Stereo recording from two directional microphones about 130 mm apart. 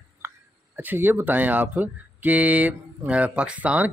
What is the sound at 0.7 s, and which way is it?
Speech, 15° right (ahead or behind).